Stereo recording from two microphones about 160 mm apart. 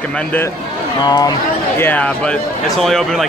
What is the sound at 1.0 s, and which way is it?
Speech, 25° left (ahead or behind).